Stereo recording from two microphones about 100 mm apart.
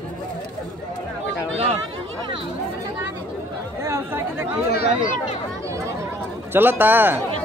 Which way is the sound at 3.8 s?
25° right (ahead or behind).